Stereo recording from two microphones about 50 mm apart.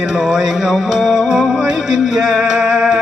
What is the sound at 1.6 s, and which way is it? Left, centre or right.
Music, centre.